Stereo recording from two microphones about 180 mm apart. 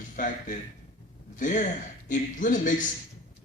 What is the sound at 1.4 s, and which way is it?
A man's voice, 45° left (ahead or behind).